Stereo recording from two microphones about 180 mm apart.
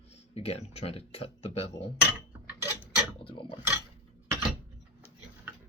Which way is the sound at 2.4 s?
10° right (ahead or behind).